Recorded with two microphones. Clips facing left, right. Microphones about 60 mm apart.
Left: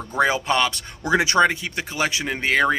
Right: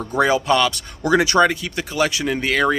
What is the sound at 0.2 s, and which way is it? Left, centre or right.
Speech, left.